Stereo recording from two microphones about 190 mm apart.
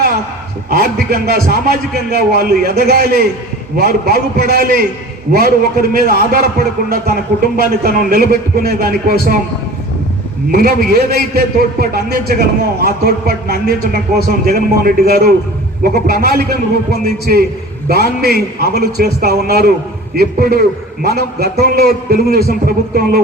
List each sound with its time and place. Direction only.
1.1 s a man's voice: 55° right (ahead or behind)
7.4 s a man's voice: 50° right (ahead or behind)
10.5 s a man's voice: 50° right (ahead or behind)